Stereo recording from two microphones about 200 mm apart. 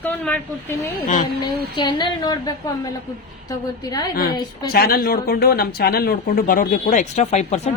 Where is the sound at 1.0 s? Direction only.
40° left (ahead or behind).